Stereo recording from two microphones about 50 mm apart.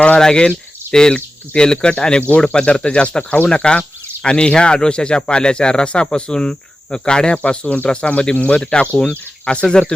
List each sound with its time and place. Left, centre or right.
0.2 s speech: centre